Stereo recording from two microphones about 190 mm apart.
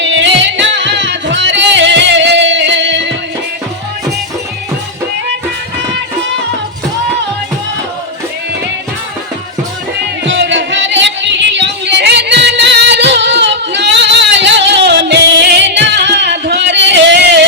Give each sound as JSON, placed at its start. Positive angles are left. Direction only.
{"t": 0.0, "sound": "music", "side_deg": -70}
{"t": 10.2, "sound": "music", "side_deg": -70}